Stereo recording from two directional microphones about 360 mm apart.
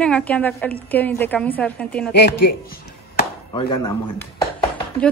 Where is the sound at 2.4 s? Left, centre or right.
Left.